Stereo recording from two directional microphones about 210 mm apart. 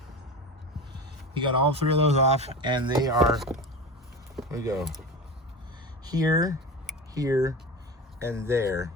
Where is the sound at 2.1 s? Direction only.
30° right (ahead or behind).